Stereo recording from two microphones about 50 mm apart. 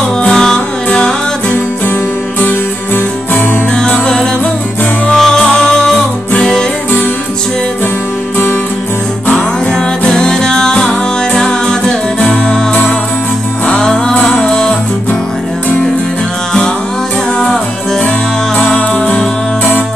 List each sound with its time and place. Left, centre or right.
0.3 s music: centre
2.4 s music: left
3.7 s music: centre
9.7 s music: centre
13.7 s music: centre
14.1 s music: left
17.4 s music: centre
18.6 s music: left